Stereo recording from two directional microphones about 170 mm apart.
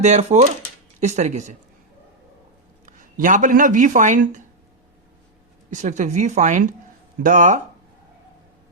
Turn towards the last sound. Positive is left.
turn(degrees=-50)  # may be behind; listen again after turning